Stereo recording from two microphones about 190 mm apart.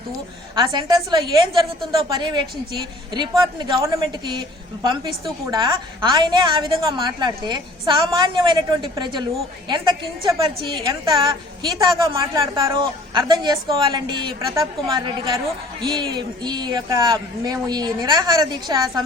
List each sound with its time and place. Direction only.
0.5 s speech: 20° right (ahead or behind)